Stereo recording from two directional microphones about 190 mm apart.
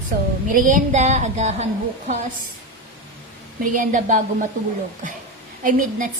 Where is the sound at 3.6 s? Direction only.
45° right (ahead or behind).